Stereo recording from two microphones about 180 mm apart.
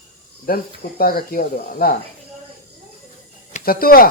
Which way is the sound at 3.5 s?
55° left (ahead or behind).